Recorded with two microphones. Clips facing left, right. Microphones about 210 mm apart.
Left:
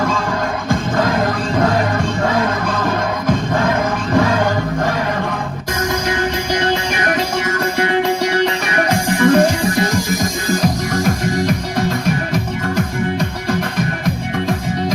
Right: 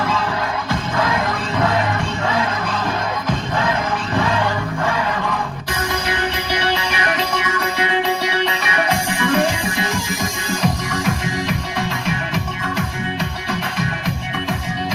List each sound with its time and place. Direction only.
0.0 s music: 50° left (ahead or behind)
6.1 s music: 45° left (ahead or behind)